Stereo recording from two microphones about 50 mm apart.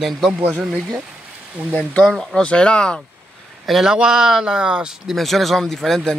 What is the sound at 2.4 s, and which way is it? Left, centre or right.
Speech, left.